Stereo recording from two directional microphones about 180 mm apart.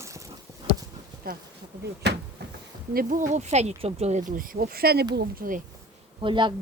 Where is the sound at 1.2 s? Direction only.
55° right (ahead or behind).